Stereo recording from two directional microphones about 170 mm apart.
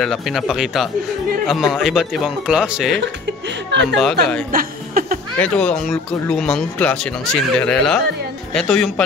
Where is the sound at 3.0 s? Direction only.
90° right.